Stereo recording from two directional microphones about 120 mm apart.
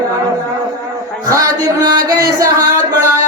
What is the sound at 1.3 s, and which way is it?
Singing, 30° right (ahead or behind).